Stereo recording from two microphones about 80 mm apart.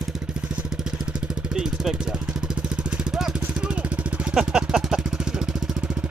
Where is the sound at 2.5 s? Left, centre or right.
Centre.